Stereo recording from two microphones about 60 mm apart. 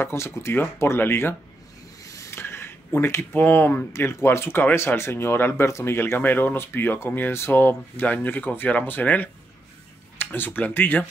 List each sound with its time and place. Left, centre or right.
0.0 s speech: left
2.3 s speech: left
5.7 s speech: left
5.9 s speech: left